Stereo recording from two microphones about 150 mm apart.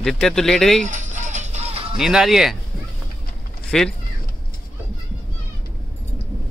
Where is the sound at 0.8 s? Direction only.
55° right (ahead or behind).